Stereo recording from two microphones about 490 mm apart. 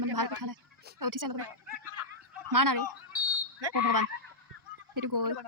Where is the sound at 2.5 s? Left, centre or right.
Right.